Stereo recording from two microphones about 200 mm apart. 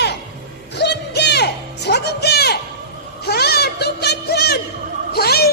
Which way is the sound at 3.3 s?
55° left (ahead or behind).